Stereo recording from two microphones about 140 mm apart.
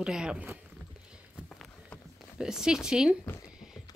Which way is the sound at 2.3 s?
5° right (ahead or behind).